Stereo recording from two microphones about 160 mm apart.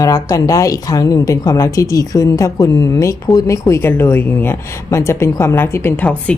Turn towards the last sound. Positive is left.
turn(degrees=10)  # may be behind; listen again after turning